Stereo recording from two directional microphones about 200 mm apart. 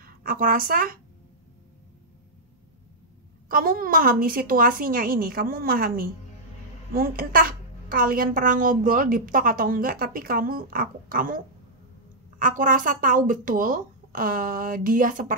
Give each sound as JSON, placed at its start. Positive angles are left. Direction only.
{"t": 0.0, "sound": "speech", "side_deg": -45}
{"t": 3.4, "sound": "a woman's voice", "side_deg": -45}